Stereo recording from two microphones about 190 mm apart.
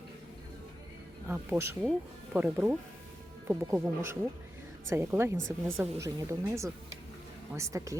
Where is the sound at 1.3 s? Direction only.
10° right (ahead or behind).